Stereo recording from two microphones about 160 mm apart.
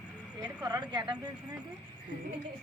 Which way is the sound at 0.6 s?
25° right (ahead or behind).